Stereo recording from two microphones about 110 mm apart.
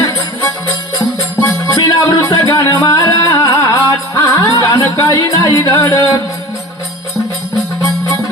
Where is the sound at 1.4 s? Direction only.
30° left (ahead or behind).